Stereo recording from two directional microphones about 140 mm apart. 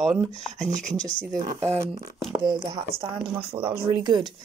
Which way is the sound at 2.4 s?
30° right (ahead or behind).